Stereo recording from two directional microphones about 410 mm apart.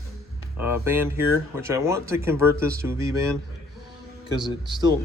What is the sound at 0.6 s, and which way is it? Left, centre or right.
Speech, centre.